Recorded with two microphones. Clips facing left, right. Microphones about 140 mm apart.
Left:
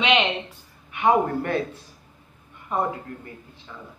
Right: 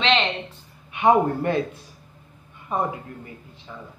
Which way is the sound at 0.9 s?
20° right (ahead or behind).